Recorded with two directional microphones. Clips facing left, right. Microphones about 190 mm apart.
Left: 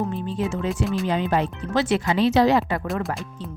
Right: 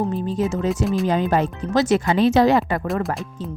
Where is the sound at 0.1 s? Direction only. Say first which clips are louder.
Right 4 dB; 40° right (ahead or behind).